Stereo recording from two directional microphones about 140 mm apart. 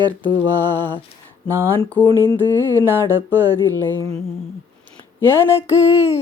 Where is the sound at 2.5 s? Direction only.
15° left (ahead or behind).